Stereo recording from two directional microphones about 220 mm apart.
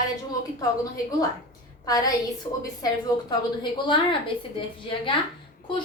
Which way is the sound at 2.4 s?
20° left (ahead or behind).